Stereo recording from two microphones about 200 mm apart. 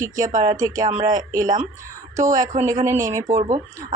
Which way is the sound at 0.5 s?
20° right (ahead or behind).